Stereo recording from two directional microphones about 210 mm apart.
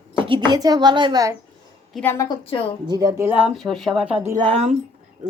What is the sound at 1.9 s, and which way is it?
Speech, 10° left (ahead or behind).